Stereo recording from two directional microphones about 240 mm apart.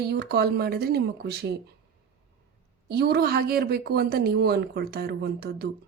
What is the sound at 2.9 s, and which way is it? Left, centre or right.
Speech, right.